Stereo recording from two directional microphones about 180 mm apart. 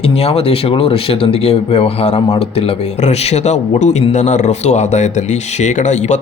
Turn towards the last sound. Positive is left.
turn(degrees=40)  # may be behind; listen again after turning